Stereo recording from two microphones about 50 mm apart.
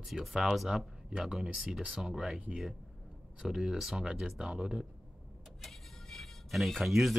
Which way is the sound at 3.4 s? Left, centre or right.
Centre.